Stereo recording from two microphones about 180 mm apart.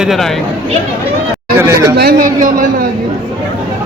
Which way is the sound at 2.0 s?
55° right (ahead or behind).